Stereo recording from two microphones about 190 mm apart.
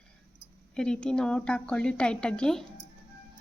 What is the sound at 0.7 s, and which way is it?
A woman's voice, 5° left (ahead or behind).